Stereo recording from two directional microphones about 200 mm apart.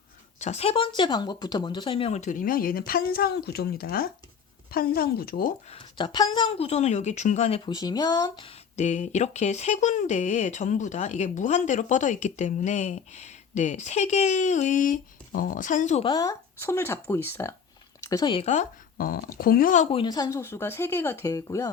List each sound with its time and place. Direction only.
0.3 s speech: 35° left (ahead or behind)
5.7 s speech: 25° left (ahead or behind)
7.6 s speech: 20° left (ahead or behind)
8.7 s speech: 35° left (ahead or behind)
16.0 s speech: 20° left (ahead or behind)